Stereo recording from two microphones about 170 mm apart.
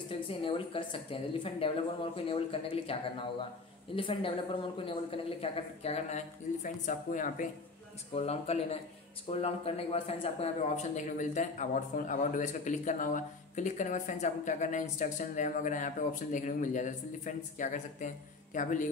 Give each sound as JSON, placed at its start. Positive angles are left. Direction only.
{"t": 0.4, "sound": "speech", "side_deg": 30}
{"t": 8.1, "sound": "speech", "side_deg": 35}